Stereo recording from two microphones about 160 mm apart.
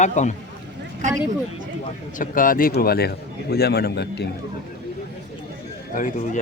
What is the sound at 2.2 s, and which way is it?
Speech, 60° left (ahead or behind).